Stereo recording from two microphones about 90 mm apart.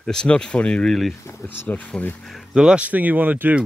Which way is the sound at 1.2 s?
35° left (ahead or behind).